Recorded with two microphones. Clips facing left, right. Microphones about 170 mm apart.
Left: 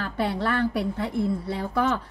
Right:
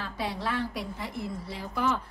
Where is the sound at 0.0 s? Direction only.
65° left (ahead or behind).